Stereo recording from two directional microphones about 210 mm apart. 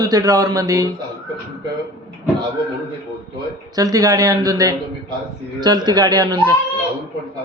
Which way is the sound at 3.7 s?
15° right (ahead or behind).